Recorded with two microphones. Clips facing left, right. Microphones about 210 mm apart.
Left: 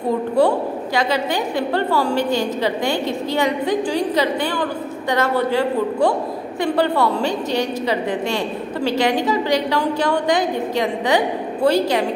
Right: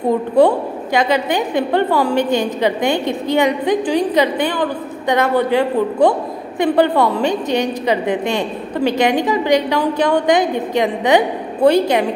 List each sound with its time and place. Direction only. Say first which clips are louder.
0.9 s a woman's voice: right 5 dB; 20° right (ahead or behind)